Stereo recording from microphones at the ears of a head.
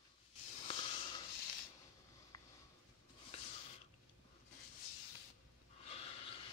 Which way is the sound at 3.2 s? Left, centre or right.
Left.